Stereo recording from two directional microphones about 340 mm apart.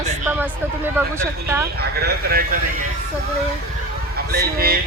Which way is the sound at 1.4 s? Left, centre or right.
Centre.